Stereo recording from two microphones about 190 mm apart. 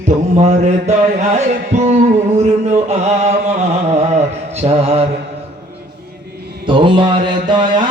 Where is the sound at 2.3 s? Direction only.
35° right (ahead or behind).